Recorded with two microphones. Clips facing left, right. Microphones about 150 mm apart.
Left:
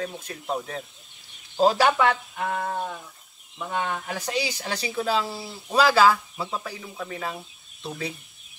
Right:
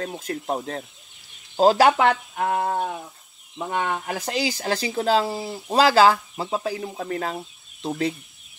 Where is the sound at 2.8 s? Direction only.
50° right (ahead or behind).